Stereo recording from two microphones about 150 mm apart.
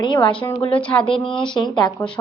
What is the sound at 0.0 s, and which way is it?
Speech, 30° left (ahead or behind).